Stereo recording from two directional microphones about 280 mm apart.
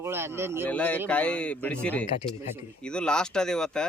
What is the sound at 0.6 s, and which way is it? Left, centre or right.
Speech, centre.